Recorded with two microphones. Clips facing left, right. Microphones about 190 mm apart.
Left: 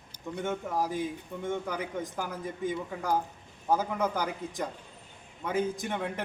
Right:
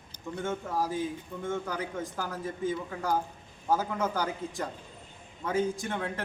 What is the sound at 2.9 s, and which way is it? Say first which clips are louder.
Speech: even; centre (ahead or behind).